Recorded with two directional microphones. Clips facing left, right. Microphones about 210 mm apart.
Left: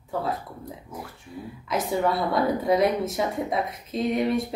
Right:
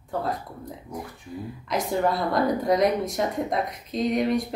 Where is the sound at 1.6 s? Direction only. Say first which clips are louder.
Even; 5° left (ahead or behind).